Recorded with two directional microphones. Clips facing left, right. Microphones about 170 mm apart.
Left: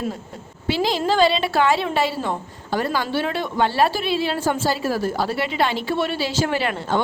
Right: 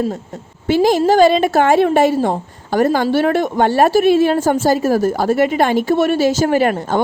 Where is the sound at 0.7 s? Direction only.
45° right (ahead or behind).